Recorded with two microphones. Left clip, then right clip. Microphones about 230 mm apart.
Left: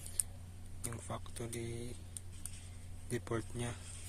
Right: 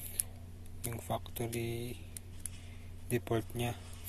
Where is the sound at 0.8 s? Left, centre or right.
Centre.